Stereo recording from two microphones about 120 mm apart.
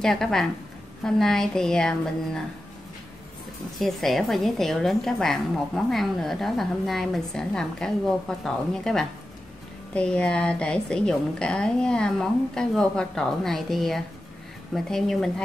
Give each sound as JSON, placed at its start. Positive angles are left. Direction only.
{"t": 0.0, "sound": "a woman's voice", "side_deg": 5}
{"t": 3.8, "sound": "a woman's voice", "side_deg": 0}